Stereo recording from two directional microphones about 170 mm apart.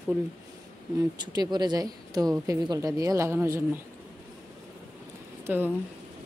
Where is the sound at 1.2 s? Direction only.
25° right (ahead or behind).